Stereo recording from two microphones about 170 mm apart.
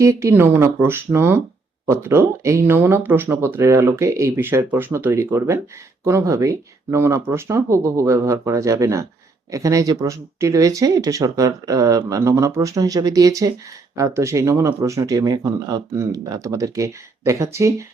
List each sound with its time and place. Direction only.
0.0 s speech: 15° right (ahead or behind)